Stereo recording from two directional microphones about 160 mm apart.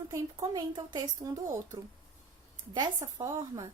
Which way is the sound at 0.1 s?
25° right (ahead or behind).